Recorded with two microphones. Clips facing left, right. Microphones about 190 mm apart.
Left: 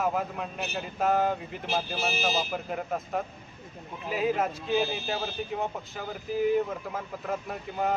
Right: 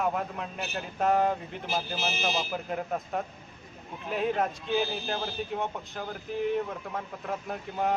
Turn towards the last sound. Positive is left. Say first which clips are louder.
# even
turn(degrees=0)  # may be behind; listen again after turning